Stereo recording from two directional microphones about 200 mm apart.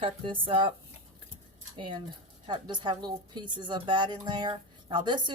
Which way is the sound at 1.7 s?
25° right (ahead or behind).